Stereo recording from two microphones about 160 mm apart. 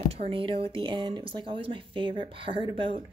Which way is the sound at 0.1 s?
35° right (ahead or behind).